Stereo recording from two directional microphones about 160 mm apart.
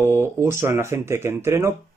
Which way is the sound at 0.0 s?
15° right (ahead or behind).